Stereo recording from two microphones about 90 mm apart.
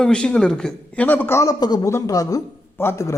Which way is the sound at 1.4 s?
45° left (ahead or behind).